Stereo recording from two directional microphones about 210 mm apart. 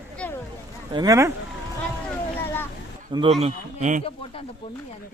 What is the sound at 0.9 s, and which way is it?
Speech, 15° right (ahead or behind).